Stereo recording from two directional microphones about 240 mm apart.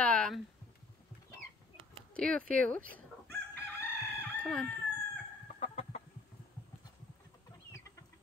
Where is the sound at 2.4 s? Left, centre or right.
Right.